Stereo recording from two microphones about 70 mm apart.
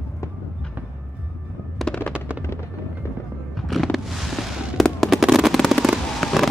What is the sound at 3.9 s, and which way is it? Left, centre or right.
Fireworks, centre.